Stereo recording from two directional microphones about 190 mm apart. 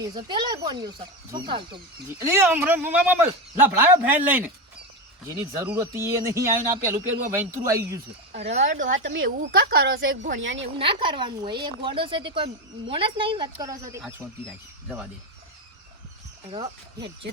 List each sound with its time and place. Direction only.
0.0 s speech: 25° right (ahead or behind)
2.2 s speech: 15° right (ahead or behind)
6.7 s speech: 40° right (ahead or behind)
7.3 s speech: 15° right (ahead or behind)
8.6 s a woman's voice: 75° right (ahead or behind)
10.8 s speech: 25° right (ahead or behind)
14.0 s speech: centre (ahead or behind)
16.5 s speech: 25° right (ahead or behind)